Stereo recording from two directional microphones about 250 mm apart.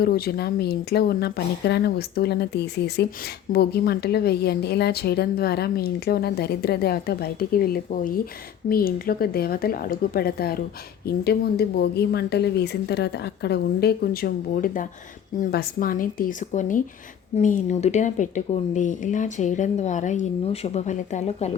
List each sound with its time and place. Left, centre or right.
0.0 s a woman's voice: left